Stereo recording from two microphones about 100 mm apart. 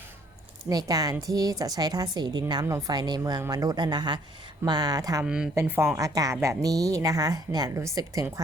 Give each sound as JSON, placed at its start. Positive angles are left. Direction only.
{"t": 0.7, "sound": "a woman's voice", "side_deg": -40}
{"t": 2.6, "sound": "a woman's voice", "side_deg": -30}
{"t": 2.9, "sound": "a woman's voice", "side_deg": -45}
{"t": 5.2, "sound": "a woman's voice", "side_deg": -10}
{"t": 5.5, "sound": "speech", "side_deg": -25}
{"t": 6.0, "sound": "a woman's voice", "side_deg": -35}